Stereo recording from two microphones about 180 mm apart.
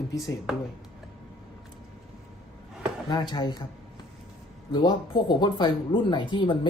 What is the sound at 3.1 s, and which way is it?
Speech, 25° left (ahead or behind).